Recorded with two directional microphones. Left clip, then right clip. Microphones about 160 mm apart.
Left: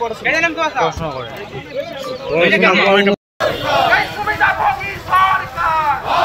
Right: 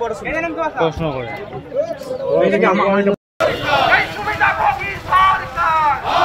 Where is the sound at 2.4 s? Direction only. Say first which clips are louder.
Left 5 dB; 20° right (ahead or behind).